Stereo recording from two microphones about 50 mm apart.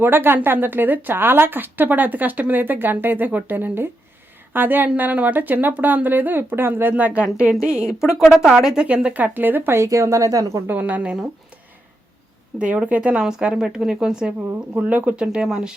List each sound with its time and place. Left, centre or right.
0.0 s a woman's voice: right
6.9 s a woman's voice: right
8.9 s speech: right
9.2 s speech: right
9.7 s a woman's voice: right
10.7 s speech: right
12.5 s speech: right
13.2 s a woman's voice: centre
14.7 s speech: right
15.1 s a woman's voice: centre